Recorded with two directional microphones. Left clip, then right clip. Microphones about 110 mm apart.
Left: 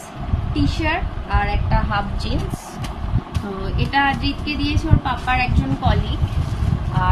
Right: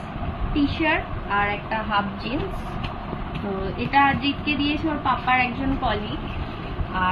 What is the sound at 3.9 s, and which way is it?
A woman's voice, 35° left (ahead or behind).